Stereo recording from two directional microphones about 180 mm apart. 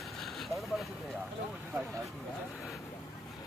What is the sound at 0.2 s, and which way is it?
Vehicle, centre (ahead or behind).